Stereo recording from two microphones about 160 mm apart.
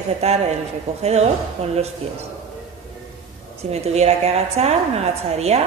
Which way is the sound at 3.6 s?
40° right (ahead or behind).